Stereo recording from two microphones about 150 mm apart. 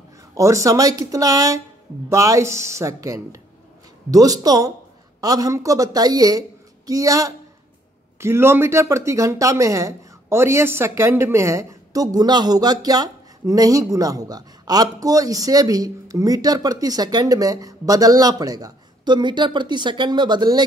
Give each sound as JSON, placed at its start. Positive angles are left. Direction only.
{"t": 0.3, "sound": "speech", "side_deg": -20}